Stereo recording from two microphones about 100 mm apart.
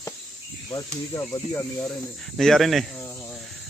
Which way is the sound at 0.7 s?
30° left (ahead or behind).